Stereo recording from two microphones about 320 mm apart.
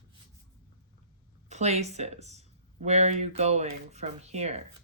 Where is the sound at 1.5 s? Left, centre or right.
Right.